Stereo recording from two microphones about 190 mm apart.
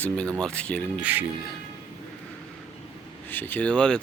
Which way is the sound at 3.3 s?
10° left (ahead or behind).